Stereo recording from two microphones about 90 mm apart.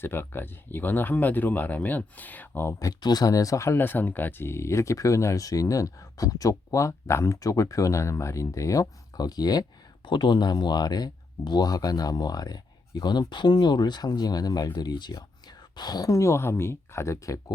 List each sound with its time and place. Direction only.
0.0 s speech: 25° left (ahead or behind)
2.7 s speech: 45° left (ahead or behind)
3.8 s speech: 20° left (ahead or behind); by 9.6 s 50° left (ahead or behind)
10.1 s speech: 60° left (ahead or behind); by 17.4 s 35° left (ahead or behind)